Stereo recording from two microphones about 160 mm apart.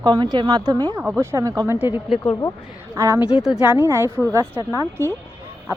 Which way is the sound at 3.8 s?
15° right (ahead or behind).